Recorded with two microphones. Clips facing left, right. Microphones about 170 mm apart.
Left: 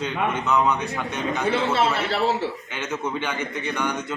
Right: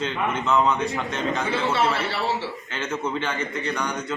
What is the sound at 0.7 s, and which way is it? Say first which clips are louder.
Speech: right 1 dB; 15° left (ahead or behind).